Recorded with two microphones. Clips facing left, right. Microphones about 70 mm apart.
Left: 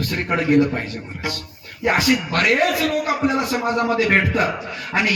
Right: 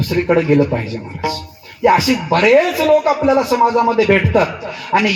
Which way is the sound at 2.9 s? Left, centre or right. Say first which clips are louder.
Right 8 dB; right.